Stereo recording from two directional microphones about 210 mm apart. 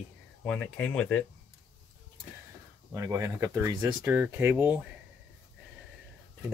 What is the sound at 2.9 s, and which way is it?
Speech, 15° right (ahead or behind).